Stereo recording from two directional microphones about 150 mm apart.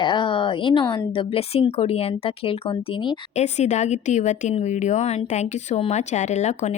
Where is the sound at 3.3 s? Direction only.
50° left (ahead or behind).